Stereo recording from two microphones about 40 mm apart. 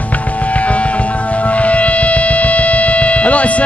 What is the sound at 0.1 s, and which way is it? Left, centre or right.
Music, left.